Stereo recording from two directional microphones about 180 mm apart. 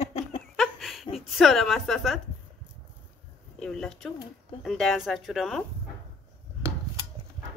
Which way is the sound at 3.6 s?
5° left (ahead or behind).